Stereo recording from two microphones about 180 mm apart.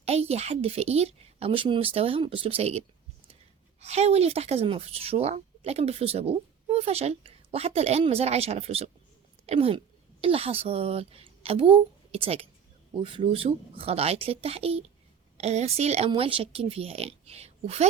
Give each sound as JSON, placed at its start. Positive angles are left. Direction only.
{"t": 0.0, "sound": "a woman's voice", "side_deg": -35}